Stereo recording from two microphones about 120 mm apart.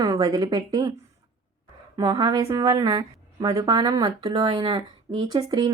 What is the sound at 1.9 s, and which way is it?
A woman's voice, 30° right (ahead or behind).